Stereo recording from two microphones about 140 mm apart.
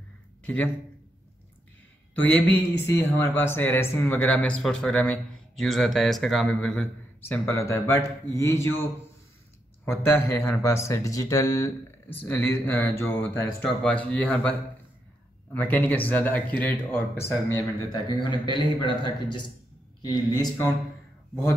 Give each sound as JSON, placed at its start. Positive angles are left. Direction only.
{"t": 0.4, "sound": "a sound", "side_deg": 10}
{"t": 2.2, "sound": "speech", "side_deg": 15}
{"t": 7.2, "sound": "a man's voice", "side_deg": 20}
{"t": 9.8, "sound": "speech", "side_deg": 15}
{"t": 18.5, "sound": "a man's voice", "side_deg": -35}
{"t": 20.0, "sound": "a man's voice", "side_deg": 30}